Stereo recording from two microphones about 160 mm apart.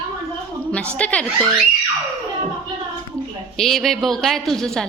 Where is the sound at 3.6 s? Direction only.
Centre (ahead or behind).